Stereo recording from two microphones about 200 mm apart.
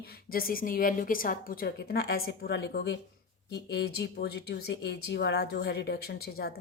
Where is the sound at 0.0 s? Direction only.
50° left (ahead or behind).